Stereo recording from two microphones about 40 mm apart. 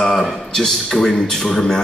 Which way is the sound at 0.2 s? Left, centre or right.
Centre.